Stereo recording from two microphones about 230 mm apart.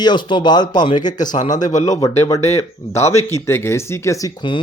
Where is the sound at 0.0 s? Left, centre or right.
Centre.